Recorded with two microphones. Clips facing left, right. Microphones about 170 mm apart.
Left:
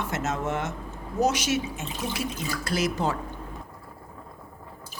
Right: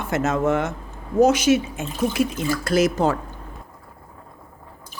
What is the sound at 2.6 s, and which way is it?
Speech, 45° right (ahead or behind).